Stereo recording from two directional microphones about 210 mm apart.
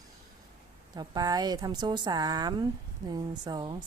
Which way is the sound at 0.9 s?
20° right (ahead or behind).